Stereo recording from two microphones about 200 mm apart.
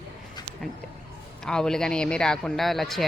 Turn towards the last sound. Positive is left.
turn(degrees=0)  # may be behind; listen again after turning